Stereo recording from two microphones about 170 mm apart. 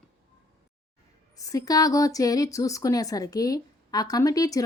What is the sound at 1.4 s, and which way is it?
Speech, 20° left (ahead or behind).